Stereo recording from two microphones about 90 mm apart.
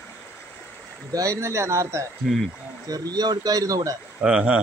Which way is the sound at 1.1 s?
35° right (ahead or behind).